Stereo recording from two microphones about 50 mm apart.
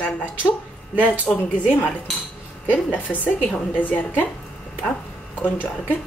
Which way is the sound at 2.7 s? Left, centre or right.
Left.